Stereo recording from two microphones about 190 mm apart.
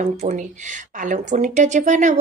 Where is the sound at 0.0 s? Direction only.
40° right (ahead or behind).